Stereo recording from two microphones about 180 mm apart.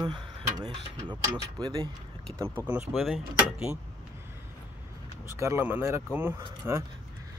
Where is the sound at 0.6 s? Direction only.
25° right (ahead or behind).